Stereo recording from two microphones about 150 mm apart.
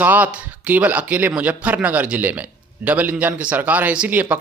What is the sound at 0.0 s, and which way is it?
Speech, 10° right (ahead or behind).